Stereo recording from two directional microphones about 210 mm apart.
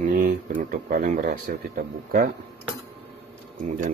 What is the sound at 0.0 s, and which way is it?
Speech, 40° right (ahead or behind).